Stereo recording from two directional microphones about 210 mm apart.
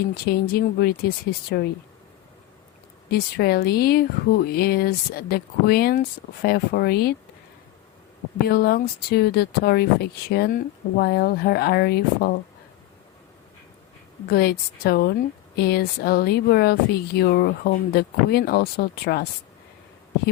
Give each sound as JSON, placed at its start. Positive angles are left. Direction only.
{"t": 0.1, "sound": "speech", "side_deg": 45}
{"t": 3.1, "sound": "speech", "side_deg": 50}
{"t": 8.4, "sound": "speech", "side_deg": 45}
{"t": 14.3, "sound": "speech", "side_deg": 50}